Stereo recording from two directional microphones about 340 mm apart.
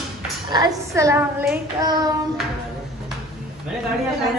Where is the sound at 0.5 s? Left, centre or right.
Centre.